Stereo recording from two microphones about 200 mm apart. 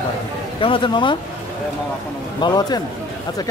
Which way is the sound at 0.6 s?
25° left (ahead or behind).